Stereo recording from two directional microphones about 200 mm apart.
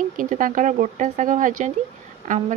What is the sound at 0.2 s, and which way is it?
Speech, 40° right (ahead or behind).